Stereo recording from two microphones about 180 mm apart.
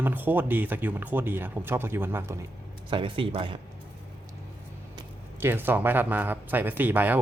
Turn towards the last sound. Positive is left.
turn(degrees=-10)  # may be behind; listen again after turning